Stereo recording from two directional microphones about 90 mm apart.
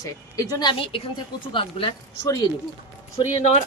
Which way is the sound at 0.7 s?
80° left.